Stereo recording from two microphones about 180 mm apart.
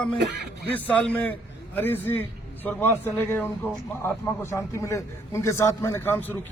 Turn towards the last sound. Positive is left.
turn(degrees=10)  # may be behind; listen again after turning